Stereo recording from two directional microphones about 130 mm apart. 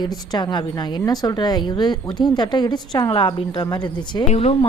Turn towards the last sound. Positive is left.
turn(degrees=50)  # may be behind; listen again after turning